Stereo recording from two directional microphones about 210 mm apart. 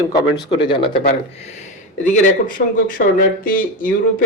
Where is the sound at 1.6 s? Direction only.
35° left (ahead or behind).